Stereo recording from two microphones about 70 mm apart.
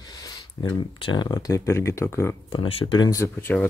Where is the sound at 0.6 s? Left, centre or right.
Left.